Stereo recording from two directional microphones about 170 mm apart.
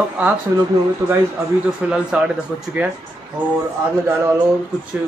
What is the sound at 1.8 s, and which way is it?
Speech, 5° right (ahead or behind).